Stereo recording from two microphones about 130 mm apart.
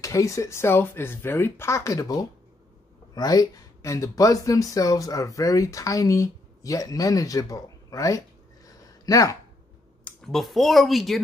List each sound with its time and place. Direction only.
0.0 s speech: 25° left (ahead or behind)
8.6 s a sound: 25° left (ahead or behind)
10.0 s speech: centre (ahead or behind)